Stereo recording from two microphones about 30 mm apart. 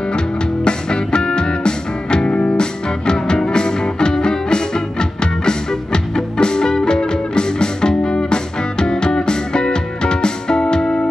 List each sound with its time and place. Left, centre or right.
0.7 s music: left
2.3 s music: left
2.6 s music: left